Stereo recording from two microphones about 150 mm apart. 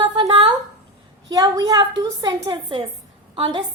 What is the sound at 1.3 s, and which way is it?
A woman's voice, 25° right (ahead or behind).